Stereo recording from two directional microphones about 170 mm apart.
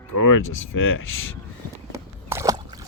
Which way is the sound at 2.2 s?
15° right (ahead or behind).